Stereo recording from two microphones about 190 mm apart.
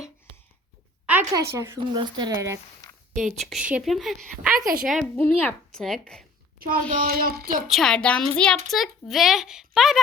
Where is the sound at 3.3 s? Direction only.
Centre (ahead or behind).